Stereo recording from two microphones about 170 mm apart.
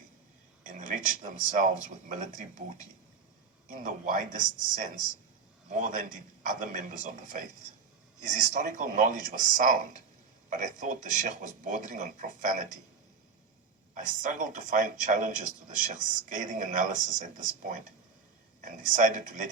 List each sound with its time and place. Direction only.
0.7 s a man's voice: 50° right (ahead or behind)
13.9 s a man's voice: 50° right (ahead or behind)